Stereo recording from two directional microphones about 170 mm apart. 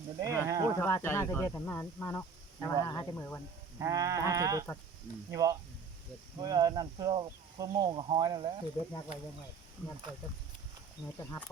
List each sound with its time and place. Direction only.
0.2 s speech: 20° right (ahead or behind)
0.8 s speech: 15° left (ahead or behind)
3.8 s speech: 20° right (ahead or behind)
11.2 s speech: 15° left (ahead or behind)